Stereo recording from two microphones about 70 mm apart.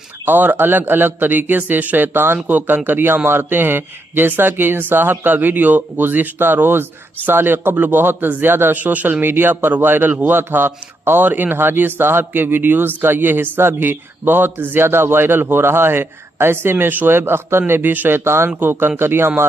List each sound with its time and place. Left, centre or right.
0.2 s a man's voice: right